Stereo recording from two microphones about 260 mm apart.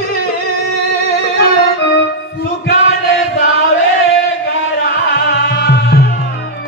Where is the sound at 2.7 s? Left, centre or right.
Left.